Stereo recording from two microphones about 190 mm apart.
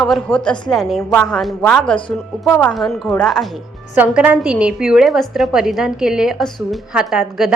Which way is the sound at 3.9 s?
10° right (ahead or behind).